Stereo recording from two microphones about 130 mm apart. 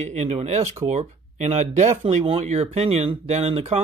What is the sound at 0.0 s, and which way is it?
Speech, 60° right (ahead or behind).